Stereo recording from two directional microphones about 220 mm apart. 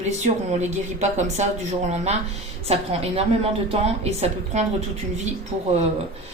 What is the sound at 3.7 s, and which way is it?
A woman's voice, 25° right (ahead or behind).